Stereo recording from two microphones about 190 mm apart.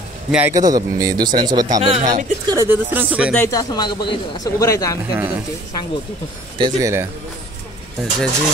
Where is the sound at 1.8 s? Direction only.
35° right (ahead or behind).